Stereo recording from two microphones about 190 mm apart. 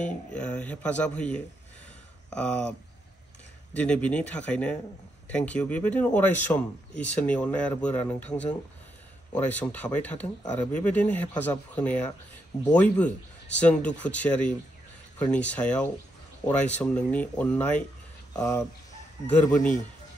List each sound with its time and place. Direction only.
0.0 s speech: 5° left (ahead or behind)
3.7 s speech: 5° left (ahead or behind)
18.3 s speech: 20° left (ahead or behind)
19.2 s speech: 5° left (ahead or behind)